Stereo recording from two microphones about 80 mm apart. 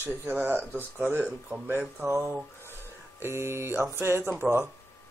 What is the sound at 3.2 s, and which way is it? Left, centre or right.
Mantra, right.